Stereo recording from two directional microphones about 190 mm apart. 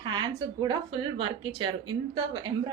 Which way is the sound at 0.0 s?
25° right (ahead or behind).